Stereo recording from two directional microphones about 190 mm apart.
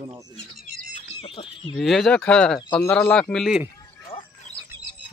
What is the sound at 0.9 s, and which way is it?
Bird, 30° left (ahead or behind).